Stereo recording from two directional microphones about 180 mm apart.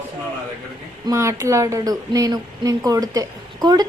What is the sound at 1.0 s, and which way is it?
A woman's voice, 15° right (ahead or behind).